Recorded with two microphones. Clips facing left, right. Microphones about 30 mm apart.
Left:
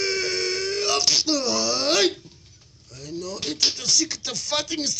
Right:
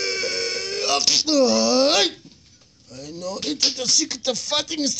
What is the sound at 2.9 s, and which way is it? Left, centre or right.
Speech, right.